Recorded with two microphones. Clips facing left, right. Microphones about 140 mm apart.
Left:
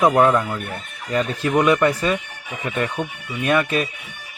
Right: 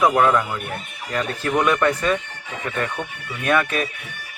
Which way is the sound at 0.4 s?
10° right (ahead or behind).